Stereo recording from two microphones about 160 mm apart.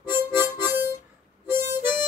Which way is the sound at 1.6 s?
15° right (ahead or behind).